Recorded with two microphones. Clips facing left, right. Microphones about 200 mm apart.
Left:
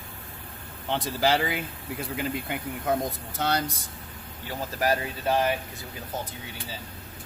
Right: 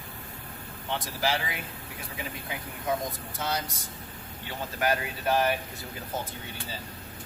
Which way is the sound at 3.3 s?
65° left (ahead or behind).